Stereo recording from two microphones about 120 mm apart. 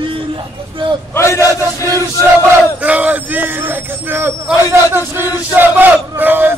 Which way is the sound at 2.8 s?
10° right (ahead or behind).